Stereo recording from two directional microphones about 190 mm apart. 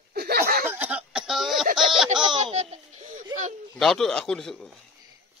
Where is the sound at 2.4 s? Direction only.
35° right (ahead or behind).